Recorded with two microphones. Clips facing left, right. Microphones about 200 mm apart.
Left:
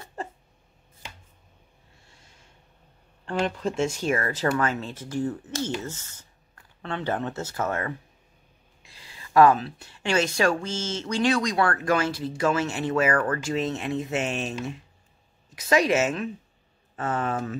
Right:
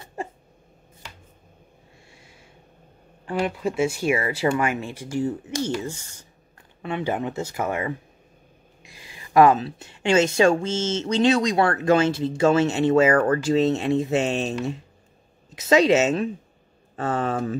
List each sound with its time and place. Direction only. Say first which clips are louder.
2.0 s a sound: right 6 dB; 10° right (ahead or behind)
3.3 s speech: right 2 dB; 10° right (ahead or behind); by 14.5 s 30° right (ahead or behind)
15.5 s speech: right 5 dB; 25° right (ahead or behind)